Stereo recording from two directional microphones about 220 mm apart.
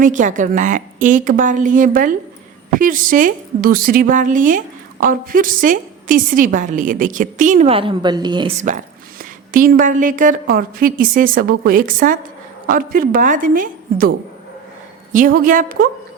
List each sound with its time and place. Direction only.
0.0 s a woman's voice: 35° right (ahead or behind); by 8.5 s 20° right (ahead or behind)
9.5 s a woman's voice: 40° right (ahead or behind)
15.1 s a woman's voice: 35° right (ahead or behind)